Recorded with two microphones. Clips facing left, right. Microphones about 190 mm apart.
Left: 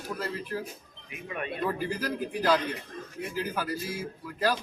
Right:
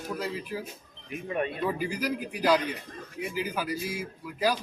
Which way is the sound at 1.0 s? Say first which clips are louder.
Right 6 dB; 35° right (ahead or behind).